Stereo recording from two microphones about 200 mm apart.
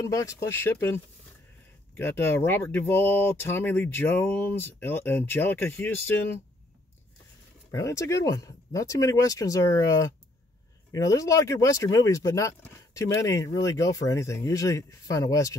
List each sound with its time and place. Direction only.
0.0 s speech: 15° left (ahead or behind)
7.7 s speech: 15° left (ahead or behind)